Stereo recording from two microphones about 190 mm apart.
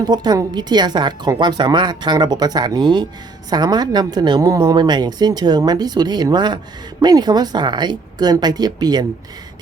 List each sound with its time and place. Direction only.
0.0 s speech: 20° right (ahead or behind)